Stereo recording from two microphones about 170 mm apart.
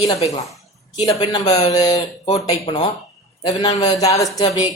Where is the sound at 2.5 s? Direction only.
35° left (ahead or behind).